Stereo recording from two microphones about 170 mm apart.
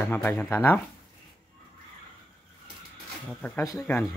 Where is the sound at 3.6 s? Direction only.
20° left (ahead or behind).